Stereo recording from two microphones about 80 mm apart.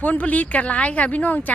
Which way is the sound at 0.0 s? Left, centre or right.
Centre.